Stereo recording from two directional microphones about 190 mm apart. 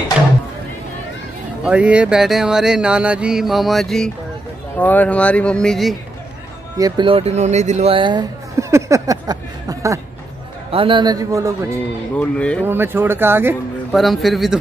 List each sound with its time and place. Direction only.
1.6 s speech: 5° right (ahead or behind)
6.8 s speech: 25° right (ahead or behind)
12.2 s speech: 5° left (ahead or behind)
12.6 s speech: 10° right (ahead or behind)
13.9 s speech: centre (ahead or behind)